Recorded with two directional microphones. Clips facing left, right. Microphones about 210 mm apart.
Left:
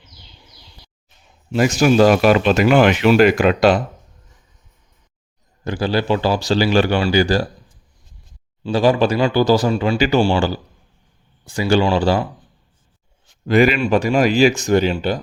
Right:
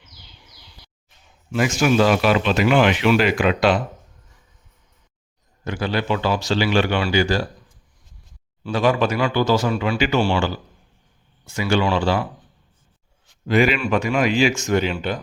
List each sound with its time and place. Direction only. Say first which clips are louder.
1.5 s speech: left 4 dB; 40° left (ahead or behind)
5.6 s speech: left 4 dB; 35° left (ahead or behind)
8.6 s speech: left 4 dB; 30° left (ahead or behind)
13.5 s speech: left 4 dB; 40° left (ahead or behind)